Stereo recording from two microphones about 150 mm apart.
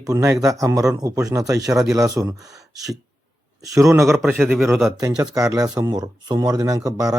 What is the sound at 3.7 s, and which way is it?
Speech, 20° right (ahead or behind).